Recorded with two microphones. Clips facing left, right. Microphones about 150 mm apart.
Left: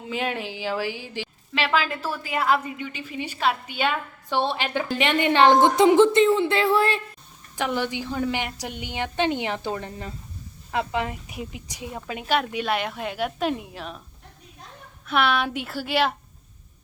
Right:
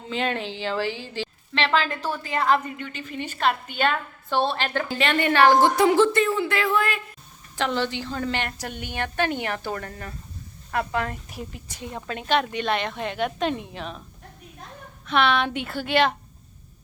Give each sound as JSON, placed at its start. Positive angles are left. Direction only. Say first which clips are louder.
{"t": 0.0, "sound": "a woman's voice", "louder": "right 1 dB", "side_deg": 10}
{"t": 7.5, "sound": "a woman's voice", "louder": "right 1 dB", "side_deg": 15}
{"t": 15.0, "sound": "a woman's voice", "louder": "right 1 dB", "side_deg": 5}